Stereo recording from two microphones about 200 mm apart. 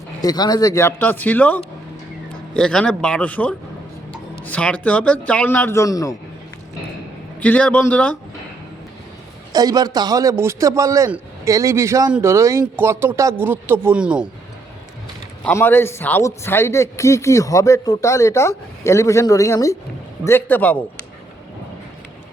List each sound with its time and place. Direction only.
0.2 s a man's voice: 20° left (ahead or behind)
7.4 s speech: 5° left (ahead or behind)
9.5 s a man's voice: 20° right (ahead or behind)
15.4 s speech: 10° left (ahead or behind)